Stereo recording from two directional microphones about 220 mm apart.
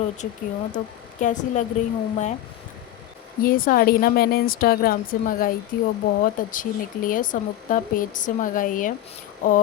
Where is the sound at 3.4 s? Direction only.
40° left (ahead or behind).